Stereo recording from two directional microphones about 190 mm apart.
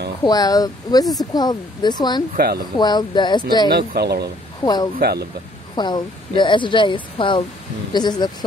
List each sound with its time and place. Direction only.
0.2 s speech: 20° left (ahead or behind)
2.3 s speech: 55° right (ahead or behind)
2.8 s speech: 20° left (ahead or behind)
3.7 s speech: 55° right (ahead or behind)
4.6 s speech: 25° left (ahead or behind)
4.9 s speech: 55° right (ahead or behind)
5.8 s speech: 20° left (ahead or behind)